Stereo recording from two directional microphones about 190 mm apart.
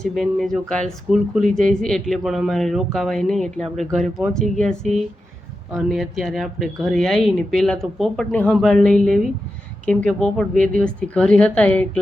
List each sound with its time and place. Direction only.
0.0 s speech: centre (ahead or behind)